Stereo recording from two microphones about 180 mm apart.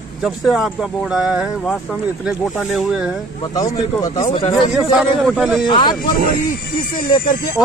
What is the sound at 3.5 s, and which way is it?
A man's voice, 20° left (ahead or behind).